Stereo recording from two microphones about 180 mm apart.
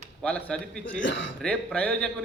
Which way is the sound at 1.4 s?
5° left (ahead or behind).